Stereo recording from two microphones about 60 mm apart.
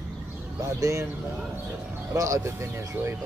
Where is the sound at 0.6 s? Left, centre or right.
Right.